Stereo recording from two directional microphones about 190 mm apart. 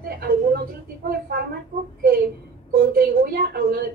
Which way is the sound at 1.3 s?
55° right (ahead or behind).